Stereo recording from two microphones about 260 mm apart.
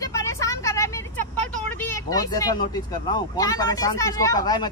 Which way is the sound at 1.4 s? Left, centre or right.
Centre.